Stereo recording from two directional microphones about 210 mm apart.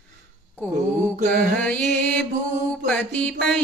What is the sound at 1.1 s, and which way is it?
Mantra, 40° right (ahead or behind).